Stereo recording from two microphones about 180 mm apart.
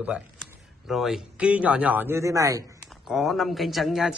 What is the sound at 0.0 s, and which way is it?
Speech, 5° right (ahead or behind).